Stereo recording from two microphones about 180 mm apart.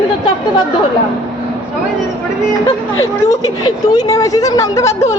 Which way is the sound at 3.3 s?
20° left (ahead or behind).